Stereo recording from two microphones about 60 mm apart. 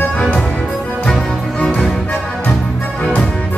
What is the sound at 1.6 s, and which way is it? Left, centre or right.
Music, centre.